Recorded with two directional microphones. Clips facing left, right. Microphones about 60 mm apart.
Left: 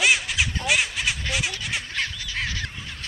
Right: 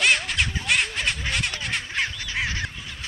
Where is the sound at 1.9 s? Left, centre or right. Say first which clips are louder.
Right 2 dB; right.